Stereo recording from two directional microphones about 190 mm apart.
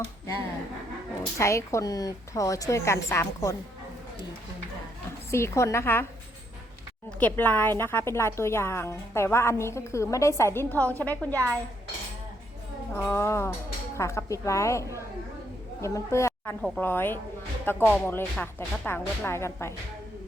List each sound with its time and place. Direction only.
1.4 s a woman's voice: 15° left (ahead or behind)
5.3 s a woman's voice: 15° left (ahead or behind)
7.2 s a woman's voice: 10° left (ahead or behind)
12.9 s a woman's voice: 15° left (ahead or behind)